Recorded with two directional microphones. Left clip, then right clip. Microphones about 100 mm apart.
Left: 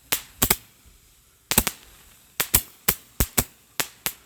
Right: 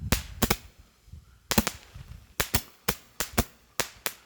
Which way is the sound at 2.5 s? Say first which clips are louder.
Left 4 dB; 35° left (ahead or behind).